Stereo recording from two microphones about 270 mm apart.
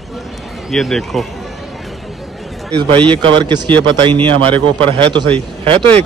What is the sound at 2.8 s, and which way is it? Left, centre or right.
Speech, centre.